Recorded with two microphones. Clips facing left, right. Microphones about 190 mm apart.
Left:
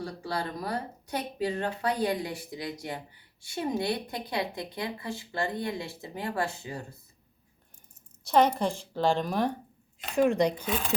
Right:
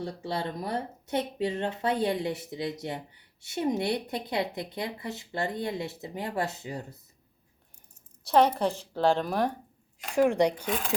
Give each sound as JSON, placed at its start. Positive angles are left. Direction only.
{"t": 0.0, "sound": "speech", "side_deg": -25}
{"t": 8.3, "sound": "a woman's voice", "side_deg": -5}